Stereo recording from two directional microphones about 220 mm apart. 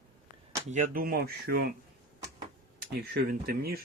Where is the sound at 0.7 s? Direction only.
35° right (ahead or behind).